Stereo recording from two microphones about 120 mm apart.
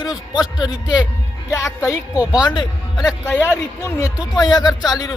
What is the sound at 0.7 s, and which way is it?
A man's voice, 30° left (ahead or behind).